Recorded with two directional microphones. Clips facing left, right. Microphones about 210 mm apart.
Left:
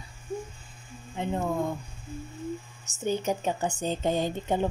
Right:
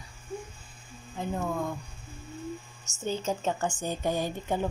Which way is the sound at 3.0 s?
15° left (ahead or behind).